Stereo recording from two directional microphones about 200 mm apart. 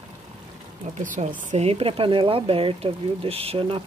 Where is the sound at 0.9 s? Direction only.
40° right (ahead or behind).